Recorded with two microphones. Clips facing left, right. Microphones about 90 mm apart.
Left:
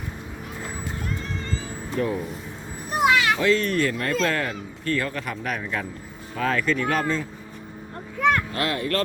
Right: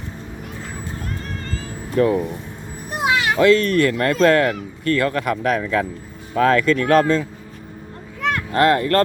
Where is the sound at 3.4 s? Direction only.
70° right (ahead or behind); by 7.2 s 85° right.